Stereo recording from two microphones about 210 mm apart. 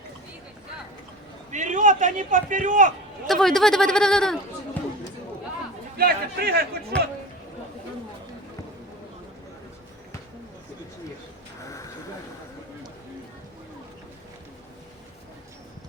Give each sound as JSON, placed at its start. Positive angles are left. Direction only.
{"t": 1.5, "sound": "a man's voice", "side_deg": -35}
{"t": 3.2, "sound": "speech", "side_deg": 0}
{"t": 6.0, "sound": "a man's voice", "side_deg": -45}
{"t": 6.9, "sound": "speech", "side_deg": 5}